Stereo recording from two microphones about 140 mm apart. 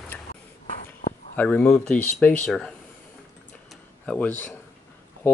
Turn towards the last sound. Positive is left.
turn(degrees=15)  # may be behind; listen again after turning